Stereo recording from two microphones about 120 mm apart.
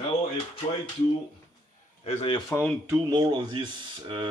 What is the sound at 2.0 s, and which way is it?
Speech, 60° left (ahead or behind).